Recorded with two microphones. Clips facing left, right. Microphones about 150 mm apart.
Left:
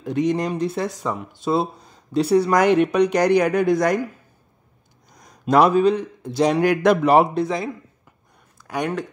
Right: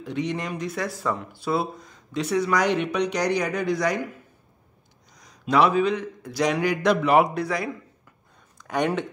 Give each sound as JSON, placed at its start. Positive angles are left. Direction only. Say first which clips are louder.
{"t": 0.0, "sound": "speech", "louder": "left 7 dB", "side_deg": 45}
{"t": 2.5, "sound": "speech", "louder": "left 5 dB", "side_deg": 50}
{"t": 5.1, "sound": "a man's voice", "louder": "left 4 dB", "side_deg": 50}
{"t": 6.6, "sound": "speech", "louder": "left 5 dB", "side_deg": 50}
{"t": 7.1, "sound": "speech", "louder": "left 3 dB", "side_deg": 30}
{"t": 8.5, "sound": "speech", "louder": "right 1 dB", "side_deg": 0}